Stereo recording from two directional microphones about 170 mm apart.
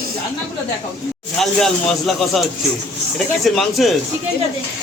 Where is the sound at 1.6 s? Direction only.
5° left (ahead or behind).